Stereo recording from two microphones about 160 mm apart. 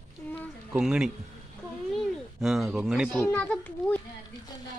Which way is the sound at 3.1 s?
10° left (ahead or behind).